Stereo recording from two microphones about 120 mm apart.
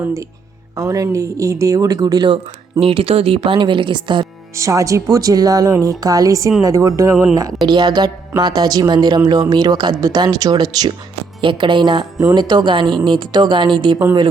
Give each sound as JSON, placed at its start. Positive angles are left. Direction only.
{"t": 0.8, "sound": "speech", "side_deg": -30}
{"t": 2.8, "sound": "speech", "side_deg": -55}
{"t": 4.5, "sound": "speech", "side_deg": -25}
{"t": 7.7, "sound": "speech", "side_deg": -40}